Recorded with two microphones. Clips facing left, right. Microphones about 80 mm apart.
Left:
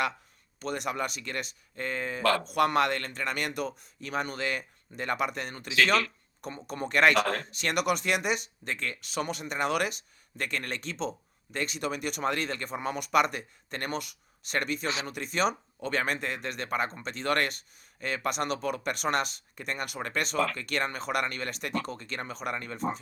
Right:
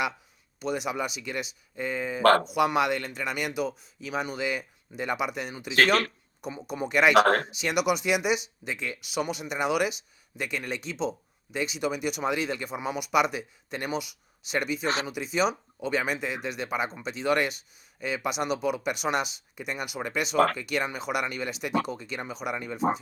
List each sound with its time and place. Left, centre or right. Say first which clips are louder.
0.6 s speech: right 2 dB; centre
5.7 s speech: right 3 dB; right
6.4 s speech: right 3 dB; centre
7.2 s speech: right 8 dB; right
7.5 s speech: right 2 dB; centre